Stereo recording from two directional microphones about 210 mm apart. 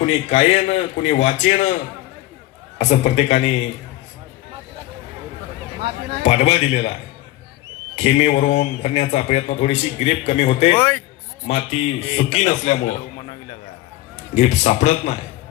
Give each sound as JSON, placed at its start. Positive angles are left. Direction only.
{"t": 0.0, "sound": "a man's voice", "side_deg": 30}
{"t": 2.7, "sound": "a man's voice", "side_deg": 30}
{"t": 6.2, "sound": "a man's voice", "side_deg": 30}
{"t": 7.9, "sound": "a man's voice", "side_deg": 30}
{"t": 10.8, "sound": "a man's voice", "side_deg": 10}
{"t": 11.4, "sound": "a man's voice", "side_deg": 30}
{"t": 14.3, "sound": "a man's voice", "side_deg": 35}